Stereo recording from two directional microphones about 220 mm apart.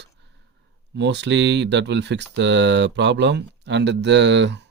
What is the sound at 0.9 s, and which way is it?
Speech, 50° right (ahead or behind).